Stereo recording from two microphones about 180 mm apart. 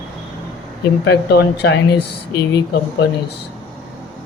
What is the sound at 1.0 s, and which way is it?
Speech, 65° left (ahead or behind).